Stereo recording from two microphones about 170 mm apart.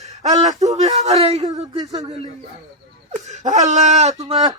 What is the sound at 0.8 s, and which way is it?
Speech, 40° right (ahead or behind).